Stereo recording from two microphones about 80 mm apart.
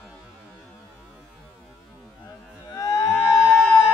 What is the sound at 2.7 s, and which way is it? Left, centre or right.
Moo, left.